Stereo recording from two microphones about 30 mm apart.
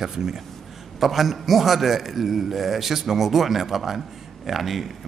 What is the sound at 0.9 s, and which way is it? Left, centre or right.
A man's voice, centre.